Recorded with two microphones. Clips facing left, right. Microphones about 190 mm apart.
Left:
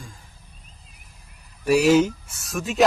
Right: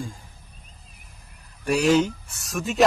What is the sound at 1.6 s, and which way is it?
Speech, 5° left (ahead or behind).